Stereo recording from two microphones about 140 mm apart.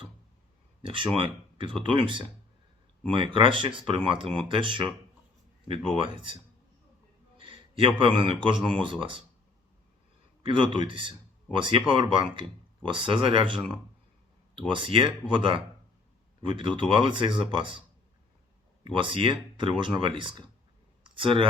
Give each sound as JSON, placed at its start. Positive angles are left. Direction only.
{"t": 0.8, "sound": "speech", "side_deg": -40}
{"t": 10.4, "sound": "speech", "side_deg": -35}
{"t": 18.9, "sound": "speech", "side_deg": -35}
{"t": 21.0, "sound": "a sound", "side_deg": -40}